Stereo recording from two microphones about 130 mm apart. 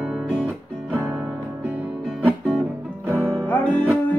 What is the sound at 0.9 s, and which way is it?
Music, 15° right (ahead or behind).